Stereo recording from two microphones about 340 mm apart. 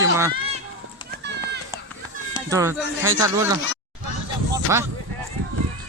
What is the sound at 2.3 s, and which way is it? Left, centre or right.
Speech, centre.